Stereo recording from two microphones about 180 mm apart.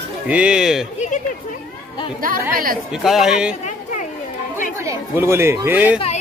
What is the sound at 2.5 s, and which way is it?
Speech, 50° right (ahead or behind).